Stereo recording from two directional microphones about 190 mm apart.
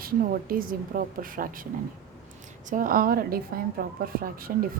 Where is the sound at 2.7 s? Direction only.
45° right (ahead or behind).